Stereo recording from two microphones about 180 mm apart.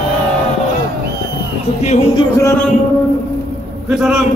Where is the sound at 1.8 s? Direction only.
40° left (ahead or behind).